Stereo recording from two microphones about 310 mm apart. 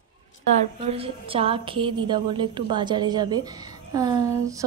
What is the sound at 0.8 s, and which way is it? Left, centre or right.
A woman's voice, centre.